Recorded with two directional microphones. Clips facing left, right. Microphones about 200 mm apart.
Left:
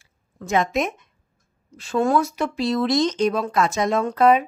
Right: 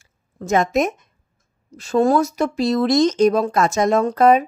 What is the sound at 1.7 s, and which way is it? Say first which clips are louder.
Speech: right 4 dB; 40° right (ahead or behind).